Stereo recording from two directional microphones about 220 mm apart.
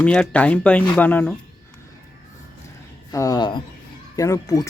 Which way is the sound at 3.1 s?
15° left (ahead or behind).